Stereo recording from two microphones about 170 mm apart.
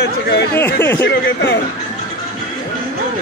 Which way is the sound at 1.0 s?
90° left.